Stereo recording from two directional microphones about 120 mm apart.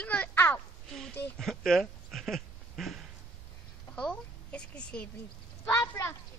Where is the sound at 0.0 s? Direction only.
15° left (ahead or behind).